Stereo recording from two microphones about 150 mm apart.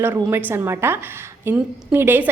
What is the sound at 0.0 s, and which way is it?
A woman's voice, 15° right (ahead or behind).